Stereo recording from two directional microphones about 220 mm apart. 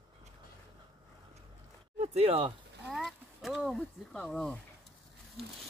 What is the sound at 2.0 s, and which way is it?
Speech, 25° right (ahead or behind).